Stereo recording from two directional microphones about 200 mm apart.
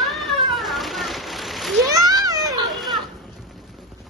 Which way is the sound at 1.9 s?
20° right (ahead or behind).